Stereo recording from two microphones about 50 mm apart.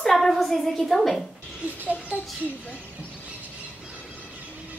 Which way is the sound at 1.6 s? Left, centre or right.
Right.